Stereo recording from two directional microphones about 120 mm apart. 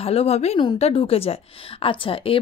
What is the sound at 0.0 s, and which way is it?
A woman's voice, 55° left (ahead or behind).